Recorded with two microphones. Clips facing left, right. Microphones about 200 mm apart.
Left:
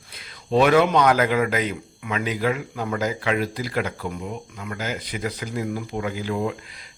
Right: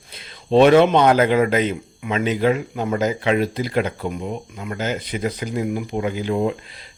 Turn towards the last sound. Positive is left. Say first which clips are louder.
# right 4 dB
turn(degrees=-25)  # may be behind; listen again after turning